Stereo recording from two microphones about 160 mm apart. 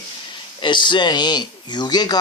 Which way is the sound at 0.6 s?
30° left (ahead or behind).